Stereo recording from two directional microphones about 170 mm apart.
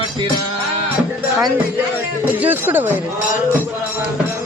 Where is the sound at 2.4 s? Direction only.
10° right (ahead or behind).